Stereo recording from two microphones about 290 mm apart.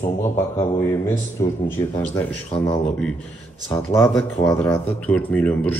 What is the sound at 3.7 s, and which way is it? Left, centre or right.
Speech, centre.